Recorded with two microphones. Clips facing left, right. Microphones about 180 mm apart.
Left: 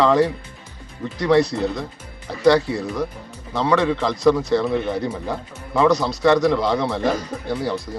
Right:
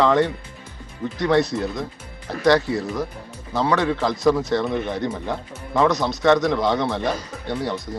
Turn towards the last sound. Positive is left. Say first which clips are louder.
# left 2 dB
turn(degrees=0)  # may be behind; listen again after turning